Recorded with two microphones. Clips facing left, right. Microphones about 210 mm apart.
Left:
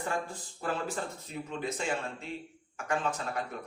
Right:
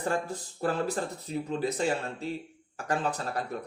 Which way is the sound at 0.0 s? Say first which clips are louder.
Right 4 dB; 35° right (ahead or behind).